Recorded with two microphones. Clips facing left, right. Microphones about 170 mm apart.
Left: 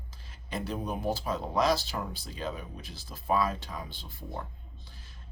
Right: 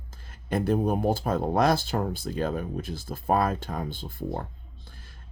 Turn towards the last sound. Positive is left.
turn(degrees=-50)  # may be behind; listen again after turning